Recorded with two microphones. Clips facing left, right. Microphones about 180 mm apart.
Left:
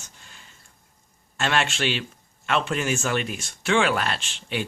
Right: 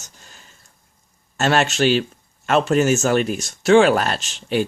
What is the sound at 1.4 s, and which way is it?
Speech, 40° right (ahead or behind).